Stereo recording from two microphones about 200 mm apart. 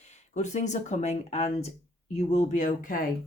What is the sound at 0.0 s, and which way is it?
Speech, 35° left (ahead or behind).